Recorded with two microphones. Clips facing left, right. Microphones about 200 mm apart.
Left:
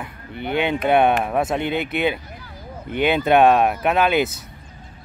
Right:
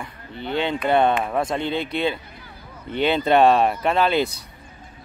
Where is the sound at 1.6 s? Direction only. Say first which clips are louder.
Left 2 dB; 55° left (ahead or behind).